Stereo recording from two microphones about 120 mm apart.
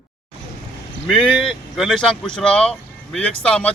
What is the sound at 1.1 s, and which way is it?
Speech, 5° left (ahead or behind).